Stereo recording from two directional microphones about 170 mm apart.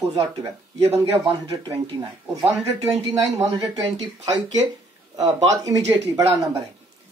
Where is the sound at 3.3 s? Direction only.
25° right (ahead or behind).